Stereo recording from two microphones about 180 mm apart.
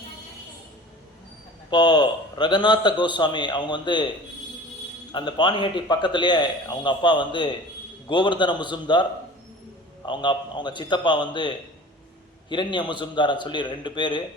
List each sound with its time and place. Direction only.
1.7 s a man's voice: 25° left (ahead or behind)
5.1 s a man's voice: 25° left (ahead or behind)
10.1 s a man's voice: 25° left (ahead or behind)